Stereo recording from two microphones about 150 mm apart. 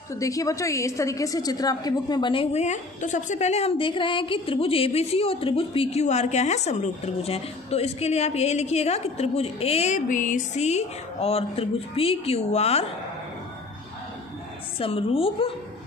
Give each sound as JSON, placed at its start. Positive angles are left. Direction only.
{"t": 0.1, "sound": "a woman's voice", "side_deg": 20}
{"t": 2.5, "sound": "a woman's voice", "side_deg": 50}
{"t": 9.9, "sound": "a woman's voice", "side_deg": 60}
{"t": 14.8, "sound": "a woman's voice", "side_deg": 40}